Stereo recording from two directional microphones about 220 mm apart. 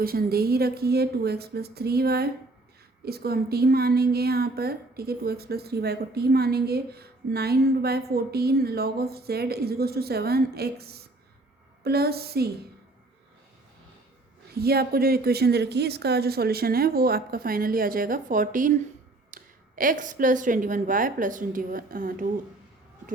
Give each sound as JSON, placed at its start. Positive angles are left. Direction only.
{"t": 0.0, "sound": "speech", "side_deg": -40}
{"t": 14.6, "sound": "a woman's voice", "side_deg": -45}